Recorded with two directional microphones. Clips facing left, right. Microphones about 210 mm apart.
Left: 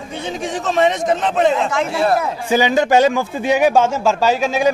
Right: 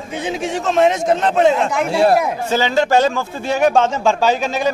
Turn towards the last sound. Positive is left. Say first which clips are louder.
# left 1 dB
turn(degrees=5)  # may be behind; listen again after turning